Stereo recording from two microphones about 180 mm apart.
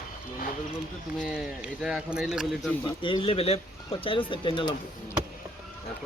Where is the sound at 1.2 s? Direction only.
5° right (ahead or behind).